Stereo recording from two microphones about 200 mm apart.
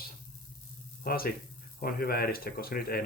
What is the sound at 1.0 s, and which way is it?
Speech, 50° left (ahead or behind).